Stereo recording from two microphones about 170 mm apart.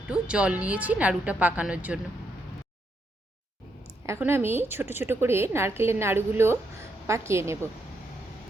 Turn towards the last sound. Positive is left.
turn(degrees=-15)  # may be behind; listen again after turning